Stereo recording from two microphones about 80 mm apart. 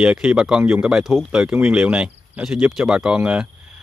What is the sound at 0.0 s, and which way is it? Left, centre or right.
Speech, centre.